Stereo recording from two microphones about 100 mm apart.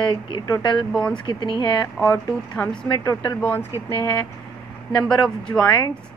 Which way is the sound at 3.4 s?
25° left (ahead or behind).